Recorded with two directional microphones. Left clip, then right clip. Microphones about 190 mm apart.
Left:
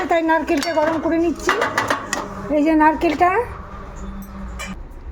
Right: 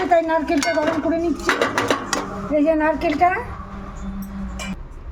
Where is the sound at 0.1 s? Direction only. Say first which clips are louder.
Left 1 dB; 30° left (ahead or behind).